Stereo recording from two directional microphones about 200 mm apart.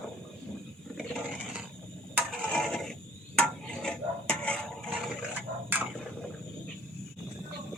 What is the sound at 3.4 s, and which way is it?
Dishes, 5° left (ahead or behind).